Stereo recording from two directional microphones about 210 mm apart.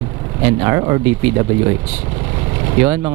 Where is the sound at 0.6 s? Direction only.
15° right (ahead or behind).